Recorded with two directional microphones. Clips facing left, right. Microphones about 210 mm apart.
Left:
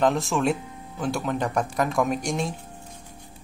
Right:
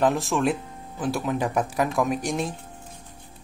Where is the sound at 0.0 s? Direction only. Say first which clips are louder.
Even; centre (ahead or behind).